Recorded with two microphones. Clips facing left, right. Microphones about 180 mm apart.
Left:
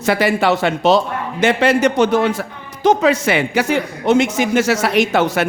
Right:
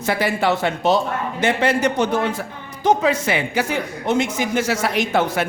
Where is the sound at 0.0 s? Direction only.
80° left.